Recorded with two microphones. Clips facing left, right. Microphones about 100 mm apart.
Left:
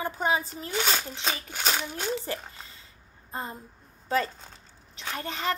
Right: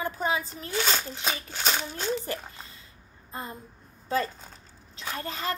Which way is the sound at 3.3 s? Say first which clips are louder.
Left 2 dB; 30° left (ahead or behind).